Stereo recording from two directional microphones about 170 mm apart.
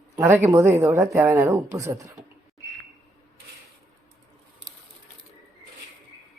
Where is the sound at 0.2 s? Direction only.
10° right (ahead or behind).